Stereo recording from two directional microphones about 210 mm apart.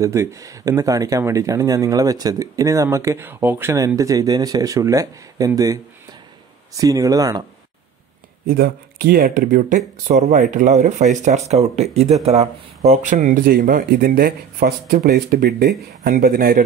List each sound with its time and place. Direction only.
0.0 s speech: 15° right (ahead or behind)
6.8 s speech: 15° right (ahead or behind)
8.5 s speech: 45° right (ahead or behind)